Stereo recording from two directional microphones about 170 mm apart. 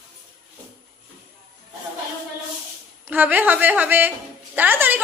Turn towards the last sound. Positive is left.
turn(degrees=-10)  # may be behind; listen again after turning